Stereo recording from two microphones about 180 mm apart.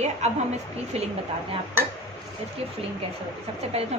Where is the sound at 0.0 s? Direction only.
40° right (ahead or behind).